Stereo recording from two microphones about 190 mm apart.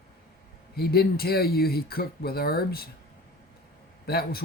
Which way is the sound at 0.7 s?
55° left (ahead or behind).